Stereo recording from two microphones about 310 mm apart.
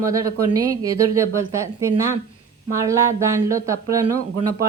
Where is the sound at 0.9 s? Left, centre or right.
Right.